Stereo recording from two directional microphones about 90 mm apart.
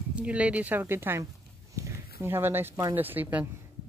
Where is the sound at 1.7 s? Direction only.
30° right (ahead or behind).